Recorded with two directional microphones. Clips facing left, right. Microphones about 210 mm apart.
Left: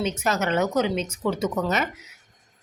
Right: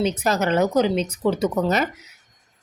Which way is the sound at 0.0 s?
35° right (ahead or behind).